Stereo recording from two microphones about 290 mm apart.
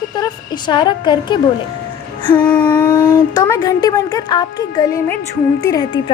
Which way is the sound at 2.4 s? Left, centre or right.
Centre.